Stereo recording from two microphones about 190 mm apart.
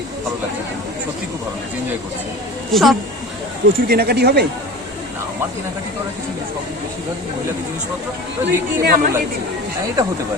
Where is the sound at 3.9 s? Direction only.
55° right (ahead or behind).